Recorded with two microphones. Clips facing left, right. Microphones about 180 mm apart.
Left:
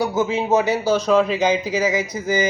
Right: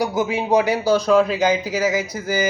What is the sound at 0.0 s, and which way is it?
A man's voice, 15° right (ahead or behind).